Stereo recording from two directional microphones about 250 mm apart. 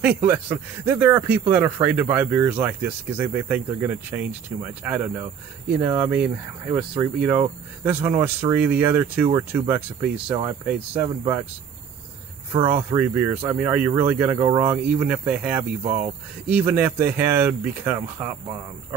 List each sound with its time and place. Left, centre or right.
0.0 s speech: centre
12.6 s speech: centre
15.8 s speech: right
16.4 s speech: centre